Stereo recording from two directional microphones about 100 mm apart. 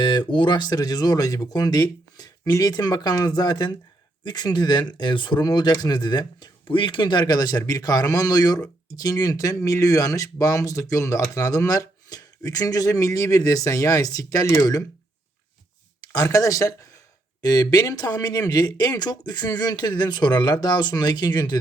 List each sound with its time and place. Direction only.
0.0 s speech: 50° left (ahead or behind)
16.0 s speech: 40° left (ahead or behind)